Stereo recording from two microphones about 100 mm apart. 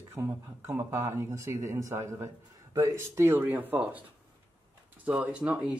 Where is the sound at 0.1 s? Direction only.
25° right (ahead or behind).